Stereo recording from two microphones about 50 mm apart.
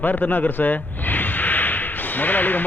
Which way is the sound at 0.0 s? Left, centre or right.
Left.